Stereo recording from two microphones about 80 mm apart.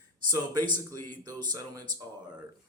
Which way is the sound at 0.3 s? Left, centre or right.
Right.